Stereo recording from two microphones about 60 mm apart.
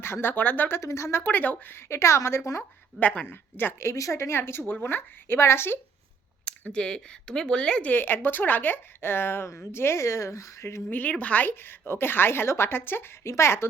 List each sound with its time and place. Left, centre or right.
0.0 s a woman's voice: left
0.8 s speech: left
1.2 s speech: left
1.7 s speech: left
3.0 s speech: left
3.2 s a woman's voice: left
3.8 s a woman's voice: left
6.7 s speech: centre
7.9 s a woman's voice: left
10.8 s a woman's voice: left